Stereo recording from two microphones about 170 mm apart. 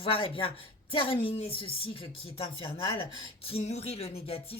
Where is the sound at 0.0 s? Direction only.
30° left (ahead or behind).